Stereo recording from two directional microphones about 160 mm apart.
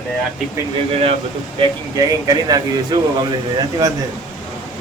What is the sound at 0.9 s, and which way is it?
Speech, 35° right (ahead or behind).